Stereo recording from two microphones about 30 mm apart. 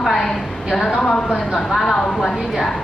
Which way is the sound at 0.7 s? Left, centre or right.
Centre.